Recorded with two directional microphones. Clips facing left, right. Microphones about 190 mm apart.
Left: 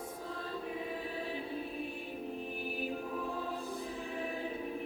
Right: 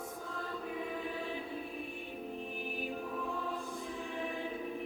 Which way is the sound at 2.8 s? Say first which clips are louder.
Left 1 dB; 35° left (ahead or behind).